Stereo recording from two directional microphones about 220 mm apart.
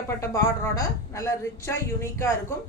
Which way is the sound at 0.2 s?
15° left (ahead or behind).